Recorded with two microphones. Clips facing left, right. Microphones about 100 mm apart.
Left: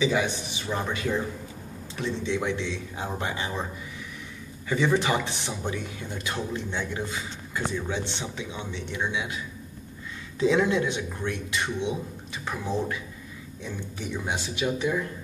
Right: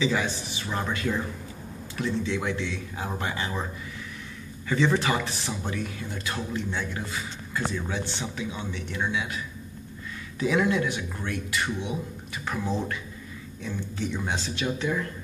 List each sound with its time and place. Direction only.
0.0 s a man's voice: 20° left (ahead or behind)
4.6 s speech: 15° left (ahead or behind)
10.4 s a man's voice: 25° left (ahead or behind)
14.2 s a man's voice: 15° left (ahead or behind)